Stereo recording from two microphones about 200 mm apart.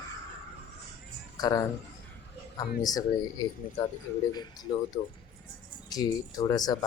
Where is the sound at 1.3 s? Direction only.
20° left (ahead or behind).